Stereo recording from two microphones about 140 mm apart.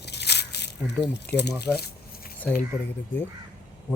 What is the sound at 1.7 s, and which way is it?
Speech, 5° left (ahead or behind).